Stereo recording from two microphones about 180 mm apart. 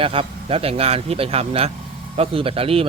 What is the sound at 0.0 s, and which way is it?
A man's voice, 30° right (ahead or behind).